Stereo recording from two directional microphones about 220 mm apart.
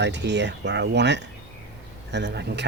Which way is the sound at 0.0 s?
50° right (ahead or behind).